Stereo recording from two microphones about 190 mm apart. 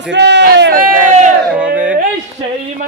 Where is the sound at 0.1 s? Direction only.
65° right (ahead or behind); by 1.3 s 45° right (ahead or behind).